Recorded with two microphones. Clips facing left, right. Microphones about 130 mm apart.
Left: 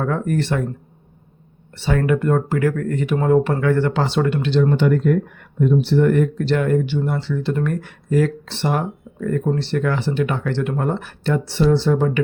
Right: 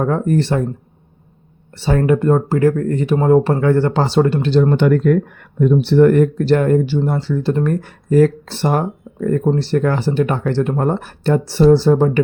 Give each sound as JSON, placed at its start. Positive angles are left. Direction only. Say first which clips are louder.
{"t": 0.0, "sound": "speech", "louder": "right 4 dB", "side_deg": -30}
{"t": 1.7, "sound": "speech", "louder": "right 4 dB", "side_deg": -35}
{"t": 4.8, "sound": "speech", "louder": "right 4 dB", "side_deg": -70}